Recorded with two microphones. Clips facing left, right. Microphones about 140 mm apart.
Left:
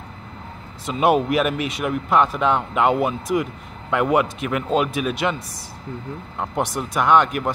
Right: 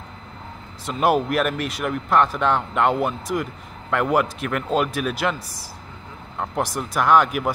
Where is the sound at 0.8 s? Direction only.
Centre (ahead or behind).